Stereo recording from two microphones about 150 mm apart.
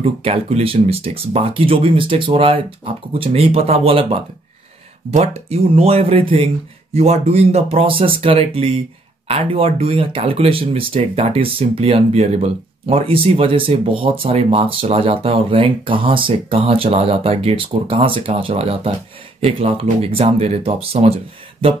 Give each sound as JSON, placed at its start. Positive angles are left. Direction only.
{"t": 0.0, "sound": "speech", "side_deg": -40}